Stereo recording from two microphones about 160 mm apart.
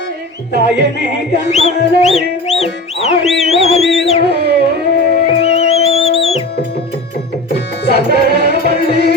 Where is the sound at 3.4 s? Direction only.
40° left (ahead or behind).